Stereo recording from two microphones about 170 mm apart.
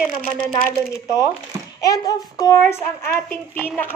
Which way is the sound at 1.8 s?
20° left (ahead or behind).